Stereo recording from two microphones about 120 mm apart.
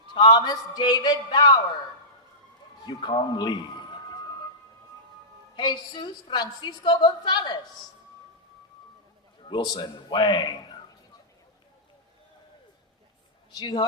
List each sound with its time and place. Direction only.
0.1 s a woman's voice: 40° left (ahead or behind)
2.8 s a man's voice: 40° left (ahead or behind)
5.5 s a woman's voice: 40° left (ahead or behind)
9.4 s a woman's voice: 40° left (ahead or behind)
13.5 s speech: 35° left (ahead or behind)